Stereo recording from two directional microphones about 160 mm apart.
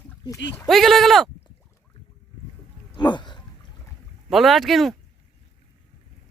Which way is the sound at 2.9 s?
30° left (ahead or behind).